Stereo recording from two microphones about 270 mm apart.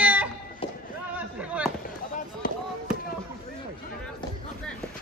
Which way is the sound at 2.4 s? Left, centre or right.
Left.